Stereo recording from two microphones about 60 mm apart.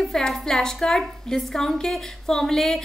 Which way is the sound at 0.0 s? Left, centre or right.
Centre.